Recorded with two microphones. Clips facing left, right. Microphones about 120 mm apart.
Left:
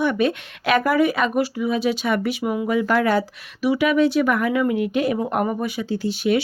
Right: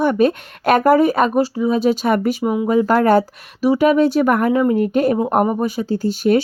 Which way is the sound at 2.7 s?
40° right (ahead or behind).